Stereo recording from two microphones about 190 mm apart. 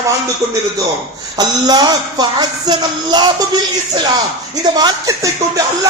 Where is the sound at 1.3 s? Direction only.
20° right (ahead or behind).